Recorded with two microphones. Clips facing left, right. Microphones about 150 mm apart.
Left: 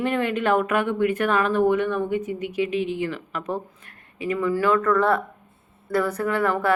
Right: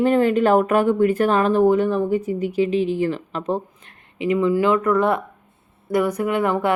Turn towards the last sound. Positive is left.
turn(degrees=-20)  # may be behind; listen again after turning